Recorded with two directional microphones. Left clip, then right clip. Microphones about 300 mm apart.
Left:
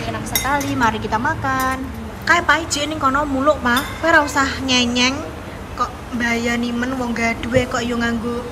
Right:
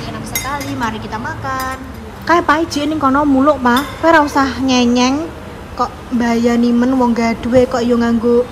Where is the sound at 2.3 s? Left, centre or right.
Right.